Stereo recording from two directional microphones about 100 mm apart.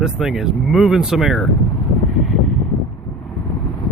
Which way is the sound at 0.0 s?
5° right (ahead or behind).